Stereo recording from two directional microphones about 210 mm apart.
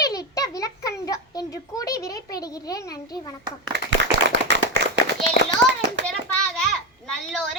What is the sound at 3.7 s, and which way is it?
Clapping, 60° right (ahead or behind).